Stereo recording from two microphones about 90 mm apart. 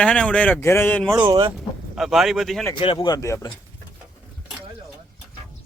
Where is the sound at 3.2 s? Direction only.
35° left (ahead or behind).